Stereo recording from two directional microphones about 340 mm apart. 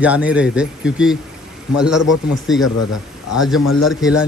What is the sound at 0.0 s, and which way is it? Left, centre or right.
Speech, centre.